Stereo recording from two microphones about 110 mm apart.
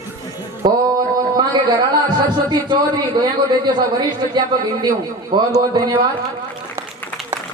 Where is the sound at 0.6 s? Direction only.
40° right (ahead or behind).